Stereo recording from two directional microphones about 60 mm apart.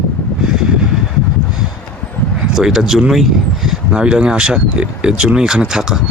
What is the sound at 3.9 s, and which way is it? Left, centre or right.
Speech, centre.